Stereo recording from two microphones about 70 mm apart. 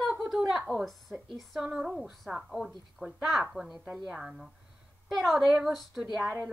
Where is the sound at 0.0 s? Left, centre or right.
Centre.